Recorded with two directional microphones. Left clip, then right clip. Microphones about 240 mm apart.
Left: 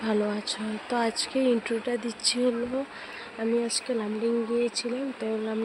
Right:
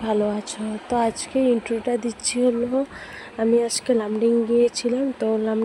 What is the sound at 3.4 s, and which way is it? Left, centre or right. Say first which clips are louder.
Speech: right 8 dB; right.